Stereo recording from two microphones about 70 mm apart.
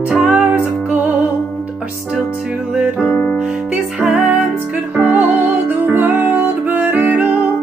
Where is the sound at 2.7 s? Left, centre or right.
Centre.